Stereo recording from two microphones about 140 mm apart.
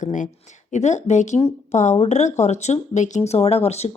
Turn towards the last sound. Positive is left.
turn(degrees=50)  # may be behind; listen again after turning